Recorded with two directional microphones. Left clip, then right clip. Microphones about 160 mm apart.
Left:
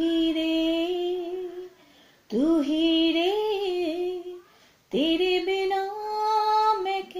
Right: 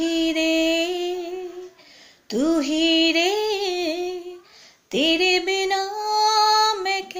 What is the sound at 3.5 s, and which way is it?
Humming, 45° right (ahead or behind).